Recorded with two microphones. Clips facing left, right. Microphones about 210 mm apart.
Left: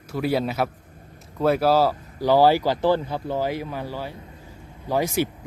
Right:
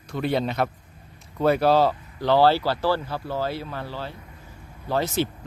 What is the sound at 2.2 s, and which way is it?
Speech, 10° left (ahead or behind).